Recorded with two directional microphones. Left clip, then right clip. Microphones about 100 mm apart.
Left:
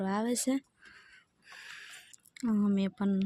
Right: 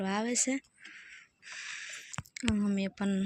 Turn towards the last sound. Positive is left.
turn(degrees=5)  # may be behind; listen again after turning